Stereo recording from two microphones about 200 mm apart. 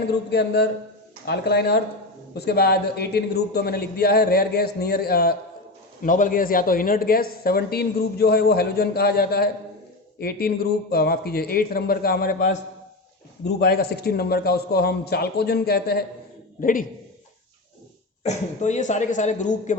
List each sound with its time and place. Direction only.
0.3 s speech: 55° left (ahead or behind)
18.2 s speech: 35° left (ahead or behind)